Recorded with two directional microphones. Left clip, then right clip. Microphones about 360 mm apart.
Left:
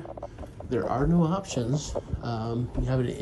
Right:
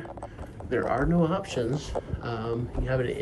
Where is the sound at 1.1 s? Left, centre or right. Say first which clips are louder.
Right 2 dB; centre.